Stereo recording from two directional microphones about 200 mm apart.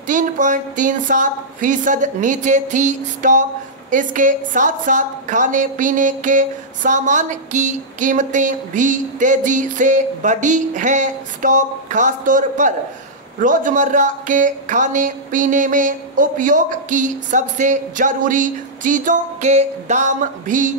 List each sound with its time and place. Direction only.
0.0 s a woman's voice: 40° right (ahead or behind)